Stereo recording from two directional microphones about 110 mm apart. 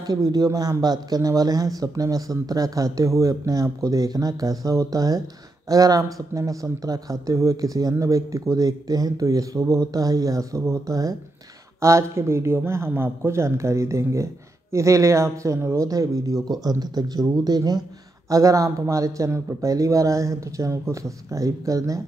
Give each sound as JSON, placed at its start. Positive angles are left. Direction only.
{"t": 0.0, "sound": "a man's voice", "side_deg": -35}